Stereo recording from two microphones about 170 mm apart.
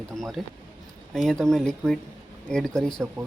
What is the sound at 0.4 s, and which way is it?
Speech, centre (ahead or behind).